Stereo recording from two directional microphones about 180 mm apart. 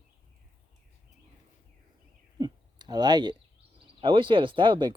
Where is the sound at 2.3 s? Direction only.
20° right (ahead or behind).